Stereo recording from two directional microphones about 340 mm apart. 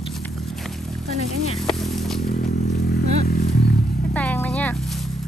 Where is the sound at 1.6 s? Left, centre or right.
Centre.